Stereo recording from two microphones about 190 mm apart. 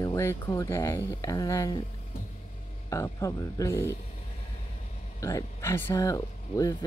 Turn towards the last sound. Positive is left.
turn(degrees=15)  # may be behind; listen again after turning